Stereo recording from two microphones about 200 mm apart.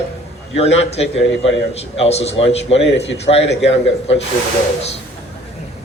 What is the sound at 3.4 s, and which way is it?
Speech, 65° left (ahead or behind).